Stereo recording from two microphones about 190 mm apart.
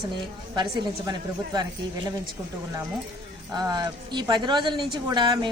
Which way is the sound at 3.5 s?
20° right (ahead or behind).